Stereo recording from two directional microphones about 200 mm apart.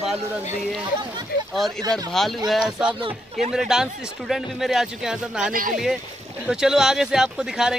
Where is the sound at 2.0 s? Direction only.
Centre (ahead or behind).